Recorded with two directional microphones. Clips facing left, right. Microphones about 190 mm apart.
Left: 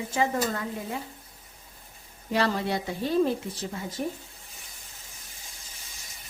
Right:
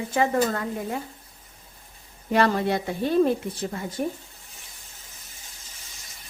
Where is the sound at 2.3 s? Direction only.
55° right (ahead or behind).